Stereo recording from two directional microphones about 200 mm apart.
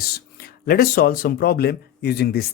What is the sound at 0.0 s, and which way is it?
Speech, 50° left (ahead or behind).